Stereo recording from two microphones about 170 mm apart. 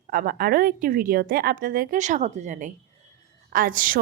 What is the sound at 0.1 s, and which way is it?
A woman's voice, 60° right (ahead or behind).